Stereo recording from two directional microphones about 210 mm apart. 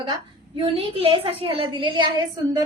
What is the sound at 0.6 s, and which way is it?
A woman's voice, 25° right (ahead or behind).